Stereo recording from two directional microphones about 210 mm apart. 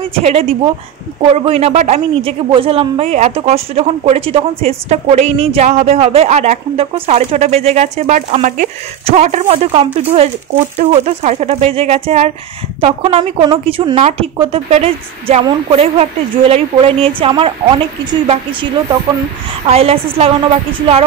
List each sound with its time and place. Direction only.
0.1 s a woman's voice: 30° right (ahead or behind)